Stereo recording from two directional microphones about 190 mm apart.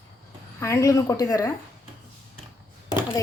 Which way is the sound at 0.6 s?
15° left (ahead or behind).